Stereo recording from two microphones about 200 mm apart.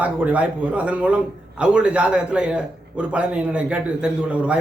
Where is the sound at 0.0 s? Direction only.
5° right (ahead or behind).